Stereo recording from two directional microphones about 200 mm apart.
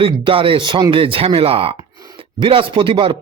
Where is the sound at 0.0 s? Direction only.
25° right (ahead or behind).